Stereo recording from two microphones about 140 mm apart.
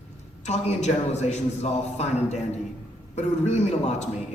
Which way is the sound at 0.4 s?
50° left (ahead or behind).